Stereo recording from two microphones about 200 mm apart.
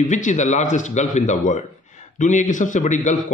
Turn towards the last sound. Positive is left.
turn(degrees=35)  # may be behind; listen again after turning